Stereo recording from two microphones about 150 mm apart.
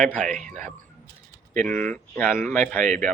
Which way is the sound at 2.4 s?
55° right (ahead or behind).